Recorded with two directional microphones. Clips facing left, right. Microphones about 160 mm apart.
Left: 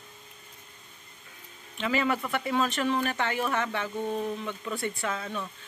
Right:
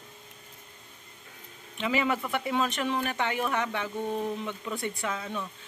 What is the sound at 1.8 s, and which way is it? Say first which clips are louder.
Speech: even; 15° right (ahead or behind).